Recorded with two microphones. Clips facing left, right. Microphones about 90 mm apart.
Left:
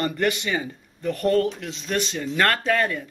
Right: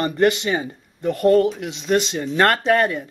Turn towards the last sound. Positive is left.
turn(degrees=-25)  # may be behind; listen again after turning